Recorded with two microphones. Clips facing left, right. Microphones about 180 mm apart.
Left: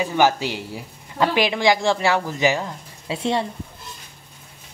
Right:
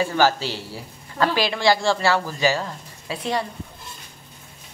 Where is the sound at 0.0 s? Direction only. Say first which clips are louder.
Left 1 dB; 15° left (ahead or behind).